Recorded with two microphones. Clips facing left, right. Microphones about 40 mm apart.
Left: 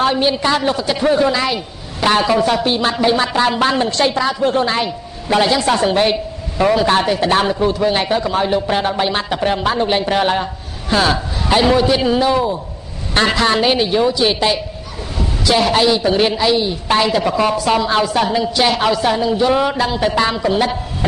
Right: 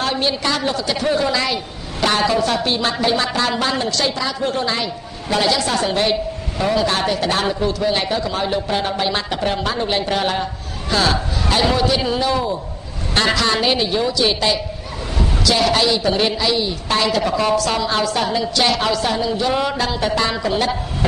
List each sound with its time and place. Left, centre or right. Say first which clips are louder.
0.0 s a woman's voice: left 5 dB; centre